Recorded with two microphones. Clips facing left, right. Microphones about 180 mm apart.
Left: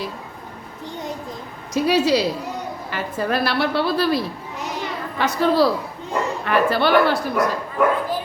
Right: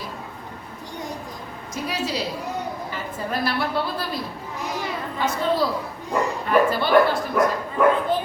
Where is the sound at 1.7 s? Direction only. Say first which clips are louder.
Left 10 dB; 75° left (ahead or behind).